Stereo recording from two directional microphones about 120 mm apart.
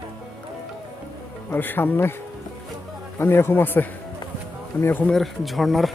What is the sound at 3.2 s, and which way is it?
Speech, 20° left (ahead or behind).